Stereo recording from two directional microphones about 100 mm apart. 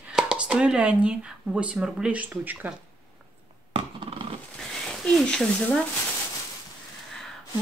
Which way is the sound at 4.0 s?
65° right (ahead or behind).